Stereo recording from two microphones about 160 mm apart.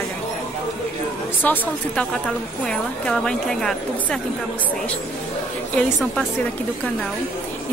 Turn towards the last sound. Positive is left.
turn(degrees=5)  # may be behind; listen again after turning